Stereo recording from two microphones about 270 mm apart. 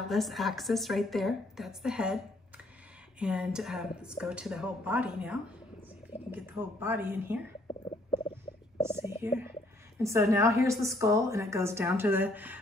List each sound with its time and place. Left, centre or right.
0.1 s a woman's voice: centre
3.2 s a woman's voice: centre
8.8 s a woman's voice: centre